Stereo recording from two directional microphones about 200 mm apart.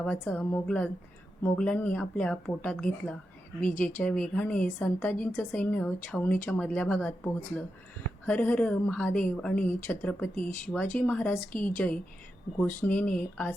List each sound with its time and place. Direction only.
0.0 s a woman's voice: 5° left (ahead or behind)
8.3 s a woman's voice: 5° left (ahead or behind)